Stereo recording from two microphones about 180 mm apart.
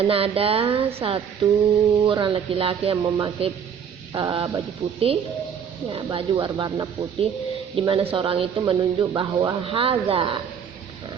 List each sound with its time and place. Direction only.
0.0 s speech: 30° right (ahead or behind)